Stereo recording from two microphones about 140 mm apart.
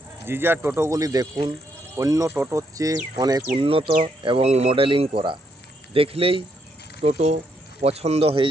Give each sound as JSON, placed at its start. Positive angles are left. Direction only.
{"t": 0.3, "sound": "speech", "side_deg": -15}
{"t": 3.5, "sound": "speech", "side_deg": -40}